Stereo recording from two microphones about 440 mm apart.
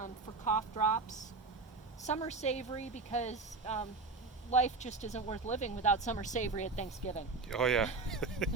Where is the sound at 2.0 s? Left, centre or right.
Centre.